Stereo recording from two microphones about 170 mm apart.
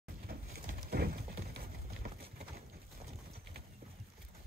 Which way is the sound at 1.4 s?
65° right (ahead or behind).